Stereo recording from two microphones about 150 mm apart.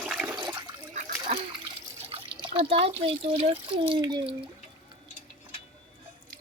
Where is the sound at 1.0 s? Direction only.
65° right (ahead or behind).